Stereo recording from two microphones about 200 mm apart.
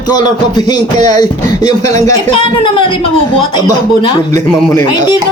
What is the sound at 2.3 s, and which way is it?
Music, 25° left (ahead or behind).